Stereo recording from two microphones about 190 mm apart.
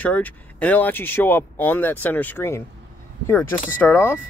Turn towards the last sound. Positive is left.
turn(degrees=10)  # may be behind; listen again after turning